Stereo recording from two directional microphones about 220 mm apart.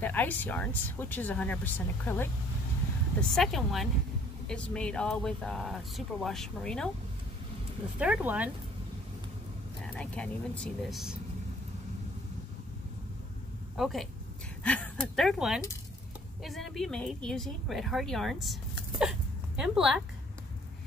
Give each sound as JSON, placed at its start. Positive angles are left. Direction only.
{"t": 0.0, "sound": "speech", "side_deg": 10}
{"t": 8.0, "sound": "speech", "side_deg": -5}
{"t": 9.9, "sound": "speech", "side_deg": 5}
{"t": 13.7, "sound": "speech", "side_deg": 0}
{"t": 18.9, "sound": "a sound", "side_deg": -5}